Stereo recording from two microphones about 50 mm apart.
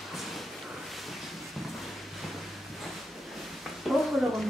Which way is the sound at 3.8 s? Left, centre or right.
Centre.